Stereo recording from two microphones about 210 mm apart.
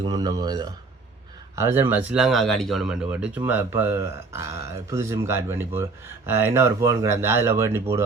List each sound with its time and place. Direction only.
0.0 s speech: 20° right (ahead or behind)